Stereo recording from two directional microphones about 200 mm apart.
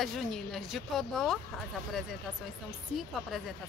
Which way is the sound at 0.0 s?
Centre (ahead or behind).